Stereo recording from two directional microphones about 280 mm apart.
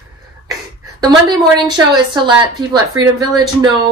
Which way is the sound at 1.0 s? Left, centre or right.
Centre.